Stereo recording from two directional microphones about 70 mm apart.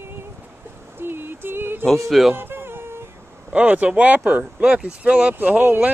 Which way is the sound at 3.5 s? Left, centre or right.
Right.